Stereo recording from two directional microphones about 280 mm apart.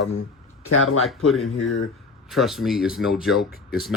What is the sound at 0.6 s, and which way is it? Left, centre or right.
Speech, left.